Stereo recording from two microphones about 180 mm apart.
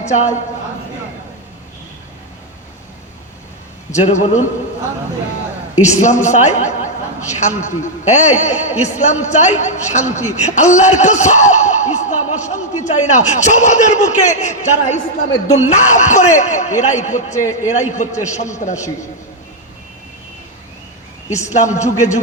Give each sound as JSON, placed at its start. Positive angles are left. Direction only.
{"t": 0.0, "sound": "a woman's voice", "side_deg": 40}
{"t": 3.9, "sound": "a man's voice", "side_deg": 40}
{"t": 5.8, "sound": "a man's voice", "side_deg": 40}
{"t": 21.3, "sound": "a man's voice", "side_deg": 40}